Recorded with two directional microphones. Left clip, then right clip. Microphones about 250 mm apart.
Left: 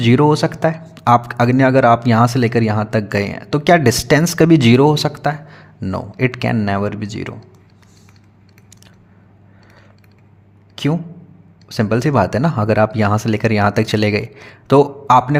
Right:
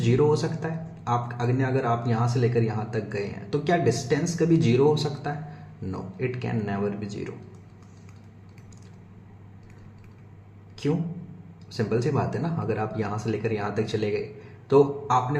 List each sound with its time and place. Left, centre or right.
0.0 s speech: left
11.7 s speech: left